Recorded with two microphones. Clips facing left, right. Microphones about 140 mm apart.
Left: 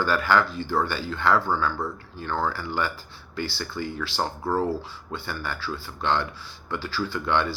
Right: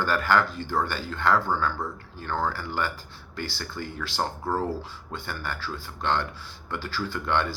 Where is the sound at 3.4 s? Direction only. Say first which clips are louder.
Left 4 dB; 50° right (ahead or behind).